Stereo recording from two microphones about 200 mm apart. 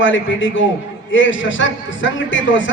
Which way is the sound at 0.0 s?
70° left (ahead or behind).